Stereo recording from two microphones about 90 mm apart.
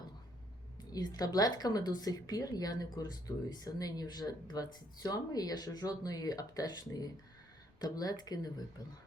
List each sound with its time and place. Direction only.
0.9 s a woman's voice: 45° left (ahead or behind)